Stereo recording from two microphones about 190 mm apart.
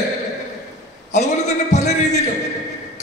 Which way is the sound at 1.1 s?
35° left (ahead or behind).